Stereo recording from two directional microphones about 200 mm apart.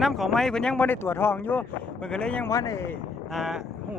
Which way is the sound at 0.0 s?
Centre (ahead or behind).